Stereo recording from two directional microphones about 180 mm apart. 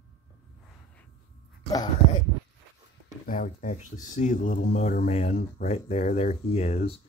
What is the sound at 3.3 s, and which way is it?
Speech, 45° left (ahead or behind).